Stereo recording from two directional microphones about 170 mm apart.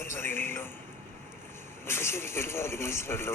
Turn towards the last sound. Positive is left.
turn(degrees=15)  # may be behind; listen again after turning